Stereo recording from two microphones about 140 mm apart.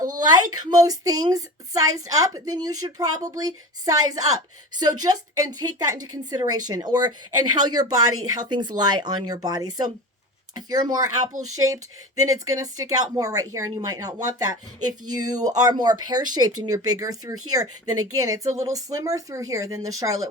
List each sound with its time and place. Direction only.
0.2 s a woman's voice: 30° right (ahead or behind)